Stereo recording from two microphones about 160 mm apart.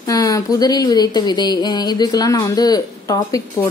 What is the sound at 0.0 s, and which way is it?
Speech, 25° left (ahead or behind).